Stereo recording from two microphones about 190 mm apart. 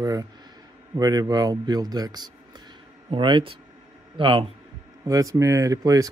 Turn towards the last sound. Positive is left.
turn(degrees=-15)  # may be behind; listen again after turning